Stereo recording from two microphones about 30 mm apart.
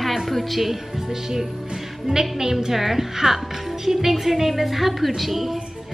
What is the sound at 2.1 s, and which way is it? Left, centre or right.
Speech, right.